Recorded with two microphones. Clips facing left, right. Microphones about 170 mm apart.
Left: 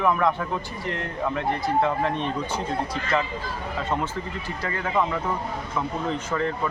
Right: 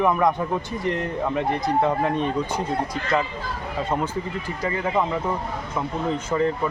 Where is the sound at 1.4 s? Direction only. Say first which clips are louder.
Right 1 dB; 15° right (ahead or behind).